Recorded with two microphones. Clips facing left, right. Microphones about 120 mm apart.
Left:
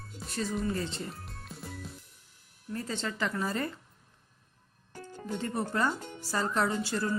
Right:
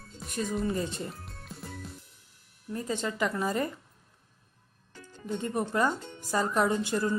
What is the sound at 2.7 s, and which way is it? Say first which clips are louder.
Speech: right 3 dB; 15° right (ahead or behind).